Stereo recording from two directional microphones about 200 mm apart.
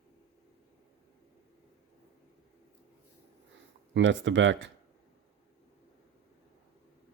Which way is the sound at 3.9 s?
70° right (ahead or behind).